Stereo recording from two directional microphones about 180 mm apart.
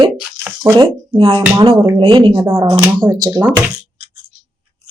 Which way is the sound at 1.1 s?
30° right (ahead or behind).